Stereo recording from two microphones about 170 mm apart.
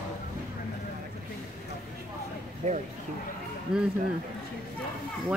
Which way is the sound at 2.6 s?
40° right (ahead or behind).